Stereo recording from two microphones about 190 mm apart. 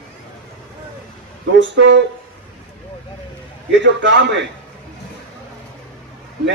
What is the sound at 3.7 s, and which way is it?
Speech, 65° right (ahead or behind).